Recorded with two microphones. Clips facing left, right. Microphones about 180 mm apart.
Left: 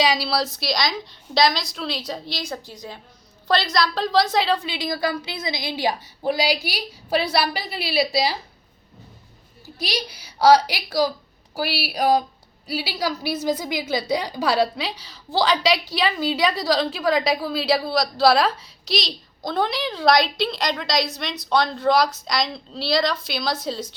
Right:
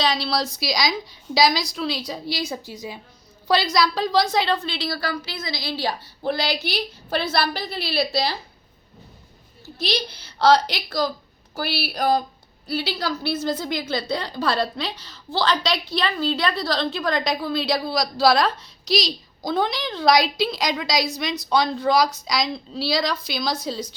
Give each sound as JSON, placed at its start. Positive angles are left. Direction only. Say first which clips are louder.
{"t": 0.0, "sound": "a woman's voice", "louder": "left 2 dB", "side_deg": 10}
{"t": 4.6, "sound": "a woman's voice", "louder": "left 2 dB", "side_deg": 15}
{"t": 9.7, "sound": "a woman's voice", "louder": "right 2 dB", "side_deg": 10}